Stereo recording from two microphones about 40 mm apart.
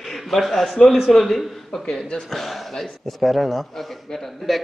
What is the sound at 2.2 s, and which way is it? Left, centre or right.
A man's voice, centre.